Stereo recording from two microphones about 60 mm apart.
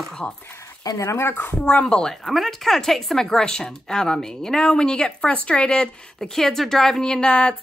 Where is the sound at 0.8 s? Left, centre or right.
Left.